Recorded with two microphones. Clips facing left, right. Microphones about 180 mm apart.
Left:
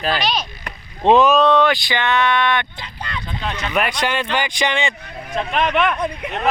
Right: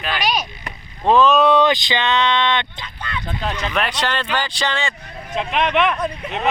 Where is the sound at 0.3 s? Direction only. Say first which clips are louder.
Right 1 dB; 15° right (ahead or behind).